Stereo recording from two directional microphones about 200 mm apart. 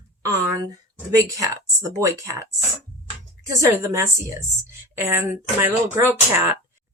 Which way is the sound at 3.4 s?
15° right (ahead or behind).